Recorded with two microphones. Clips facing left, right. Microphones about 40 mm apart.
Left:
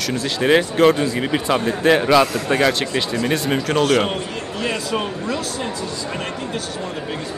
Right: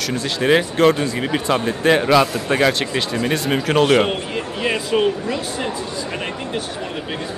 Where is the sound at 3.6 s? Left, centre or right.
Centre.